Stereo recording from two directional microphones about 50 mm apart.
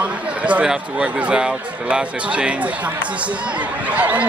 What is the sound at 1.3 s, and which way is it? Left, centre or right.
Speech, centre.